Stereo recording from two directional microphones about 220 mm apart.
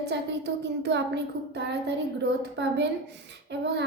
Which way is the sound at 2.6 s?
50° right (ahead or behind).